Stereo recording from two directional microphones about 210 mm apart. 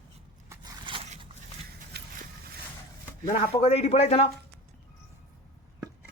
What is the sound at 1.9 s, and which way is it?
Vehicle, 50° right (ahead or behind).